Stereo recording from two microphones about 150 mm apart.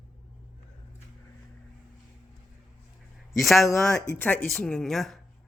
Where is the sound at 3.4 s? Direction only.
Centre (ahead or behind).